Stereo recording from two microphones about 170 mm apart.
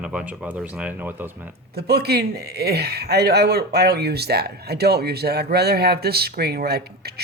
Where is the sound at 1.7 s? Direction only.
70° right (ahead or behind).